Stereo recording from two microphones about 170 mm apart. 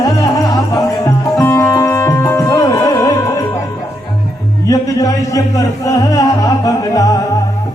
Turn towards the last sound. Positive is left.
turn(degrees=20)  # may be behind; listen again after turning